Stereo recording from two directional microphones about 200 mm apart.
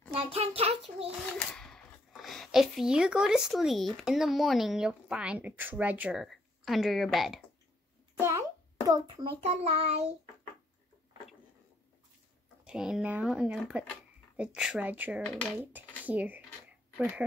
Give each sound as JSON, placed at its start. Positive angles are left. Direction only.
{"t": 0.1, "sound": "a child's voice", "side_deg": -30}
{"t": 1.5, "sound": "speech", "side_deg": 0}
{"t": 8.2, "sound": "a sound", "side_deg": -15}
{"t": 9.4, "sound": "child singing", "side_deg": -35}
{"t": 12.6, "sound": "speech", "side_deg": -5}